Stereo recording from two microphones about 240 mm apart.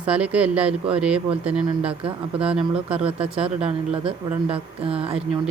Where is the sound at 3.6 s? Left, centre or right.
Right.